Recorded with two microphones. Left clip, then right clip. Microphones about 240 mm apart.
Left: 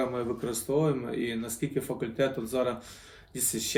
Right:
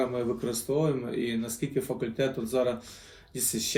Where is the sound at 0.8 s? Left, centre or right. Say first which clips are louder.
Left 1 dB; centre.